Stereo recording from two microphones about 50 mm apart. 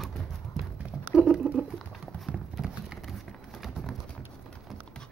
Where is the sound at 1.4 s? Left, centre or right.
Right.